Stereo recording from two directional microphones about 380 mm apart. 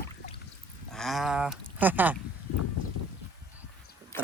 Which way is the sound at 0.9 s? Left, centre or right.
Centre.